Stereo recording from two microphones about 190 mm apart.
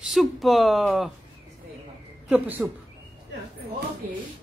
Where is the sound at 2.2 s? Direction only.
10° right (ahead or behind).